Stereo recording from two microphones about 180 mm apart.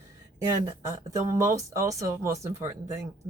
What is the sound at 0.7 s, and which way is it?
Speech, 15° right (ahead or behind).